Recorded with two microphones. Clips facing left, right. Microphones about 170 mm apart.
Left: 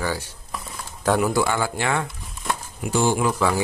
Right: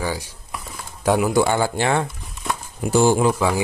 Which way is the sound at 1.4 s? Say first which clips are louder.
Right 4 dB; 30° right (ahead or behind).